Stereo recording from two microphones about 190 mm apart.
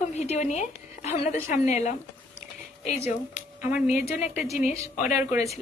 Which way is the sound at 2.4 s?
35° left (ahead or behind).